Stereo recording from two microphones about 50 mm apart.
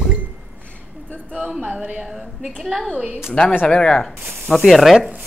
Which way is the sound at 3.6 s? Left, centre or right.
Centre.